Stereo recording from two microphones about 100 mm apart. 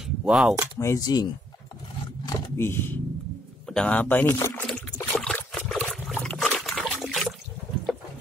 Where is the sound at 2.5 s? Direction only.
20° left (ahead or behind).